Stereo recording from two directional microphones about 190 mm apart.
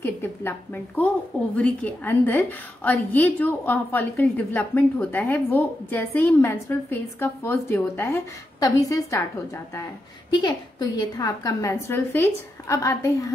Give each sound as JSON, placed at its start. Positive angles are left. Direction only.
{"t": 0.0, "sound": "a woman's voice", "side_deg": 10}
{"t": 10.4, "sound": "a woman's voice", "side_deg": 20}